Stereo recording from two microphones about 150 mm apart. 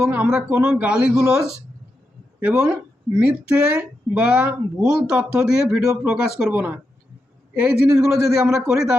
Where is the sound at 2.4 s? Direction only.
15° right (ahead or behind).